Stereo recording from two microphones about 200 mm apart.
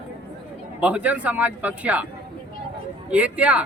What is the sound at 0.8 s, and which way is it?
Speech, 5° right (ahead or behind).